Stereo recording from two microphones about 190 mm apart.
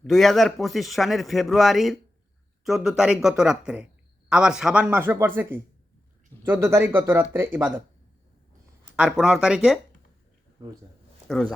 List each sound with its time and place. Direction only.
0.0 s a man's voice: centre (ahead or behind)
9.0 s a man's voice: centre (ahead or behind)
10.6 s speech: 20° right (ahead or behind)